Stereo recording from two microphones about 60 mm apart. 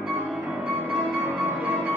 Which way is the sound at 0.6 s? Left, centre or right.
Right.